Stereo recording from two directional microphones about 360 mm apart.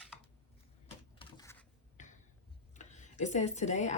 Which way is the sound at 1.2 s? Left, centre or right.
Centre.